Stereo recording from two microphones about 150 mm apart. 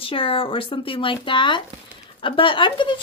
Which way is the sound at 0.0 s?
35° left (ahead or behind).